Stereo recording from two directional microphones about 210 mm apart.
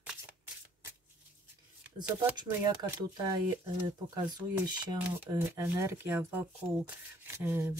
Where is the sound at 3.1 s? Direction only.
20° right (ahead or behind).